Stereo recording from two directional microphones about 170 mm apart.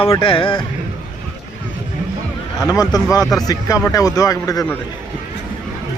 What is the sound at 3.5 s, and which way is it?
Speech, 20° left (ahead or behind).